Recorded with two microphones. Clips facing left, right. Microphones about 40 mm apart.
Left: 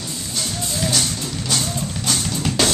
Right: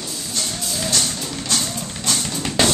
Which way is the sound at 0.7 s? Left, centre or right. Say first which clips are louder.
Left 1 dB; centre.